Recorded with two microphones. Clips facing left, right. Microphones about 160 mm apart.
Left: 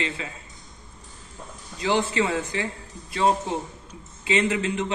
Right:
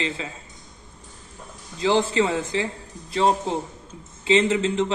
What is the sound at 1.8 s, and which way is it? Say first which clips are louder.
Speech: right 3 dB; 30° right (ahead or behind).